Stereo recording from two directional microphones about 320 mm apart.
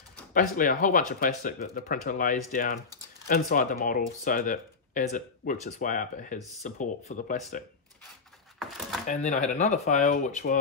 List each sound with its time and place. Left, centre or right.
0.3 s speech: left
8.5 s a sound: centre
9.0 s speech: left